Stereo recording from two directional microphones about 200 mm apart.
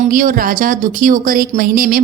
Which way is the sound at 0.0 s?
45° right (ahead or behind).